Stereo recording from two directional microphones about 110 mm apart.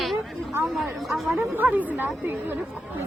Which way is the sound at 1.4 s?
15° right (ahead or behind).